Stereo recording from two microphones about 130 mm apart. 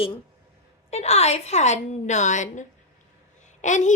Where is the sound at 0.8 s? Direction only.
55° left (ahead or behind); by 3.9 s 70° left (ahead or behind).